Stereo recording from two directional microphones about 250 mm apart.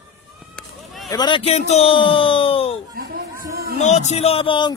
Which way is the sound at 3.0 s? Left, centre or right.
Right.